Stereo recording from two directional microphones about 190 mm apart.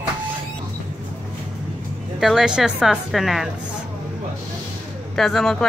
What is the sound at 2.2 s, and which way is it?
Speech, centre (ahead or behind).